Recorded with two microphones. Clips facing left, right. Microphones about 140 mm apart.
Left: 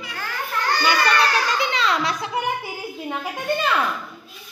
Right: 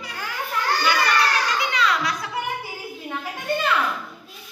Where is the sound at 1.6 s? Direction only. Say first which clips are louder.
Left 1 dB; 25° left (ahead or behind).